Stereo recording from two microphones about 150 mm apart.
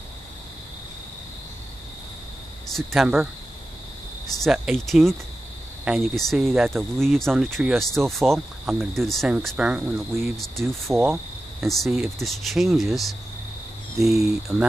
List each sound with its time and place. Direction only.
2.7 s speech: centre (ahead or behind)
4.4 s speech: centre (ahead or behind)
10.3 s speech: centre (ahead or behind)
10.9 s speech: 15° right (ahead or behind)
11.6 s speech: centre (ahead or behind)